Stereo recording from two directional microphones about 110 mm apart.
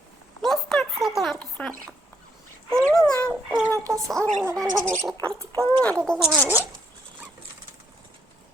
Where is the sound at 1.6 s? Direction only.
15° left (ahead or behind).